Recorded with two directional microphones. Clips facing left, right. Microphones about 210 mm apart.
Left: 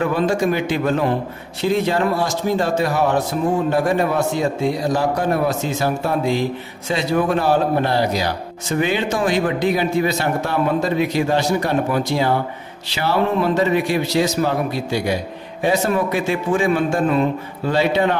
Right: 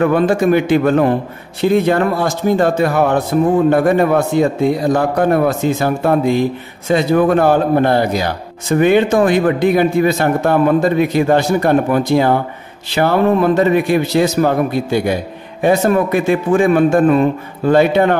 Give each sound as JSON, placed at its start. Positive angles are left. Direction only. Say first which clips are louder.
{"t": 0.0, "sound": "a man's voice", "louder": "right 5 dB", "side_deg": -55}